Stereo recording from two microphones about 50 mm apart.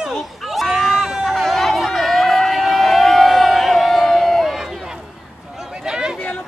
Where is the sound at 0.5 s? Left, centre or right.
Centre.